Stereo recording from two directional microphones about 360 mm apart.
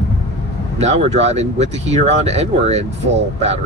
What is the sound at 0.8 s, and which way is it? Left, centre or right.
Speech, centre.